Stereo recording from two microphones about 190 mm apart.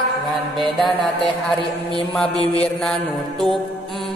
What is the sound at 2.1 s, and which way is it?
Speech, 5° left (ahead or behind).